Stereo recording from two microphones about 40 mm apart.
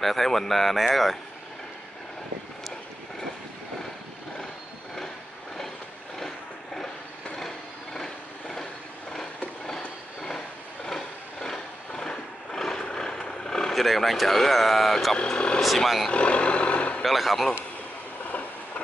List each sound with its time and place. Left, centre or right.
0.0 s speech: centre
6.1 s vehicle: centre
7.3 s a sound: centre
9.7 s a sound: centre
12.8 s vehicle: left
13.7 s speech: centre
15.3 s speech: left
15.6 s speech: centre
16.1 s vehicle: left
17.0 s speech: centre